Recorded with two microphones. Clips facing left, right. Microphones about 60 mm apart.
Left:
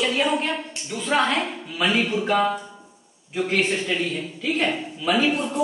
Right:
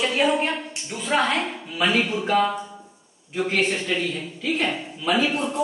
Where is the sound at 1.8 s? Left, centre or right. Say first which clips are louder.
Even; centre.